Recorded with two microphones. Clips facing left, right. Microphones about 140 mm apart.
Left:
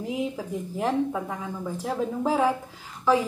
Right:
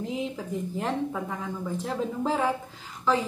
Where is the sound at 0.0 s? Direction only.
10° left (ahead or behind).